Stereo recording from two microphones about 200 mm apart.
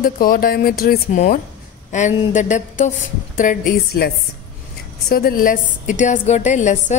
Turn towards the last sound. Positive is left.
turn(degrees=35)  # may be behind; listen again after turning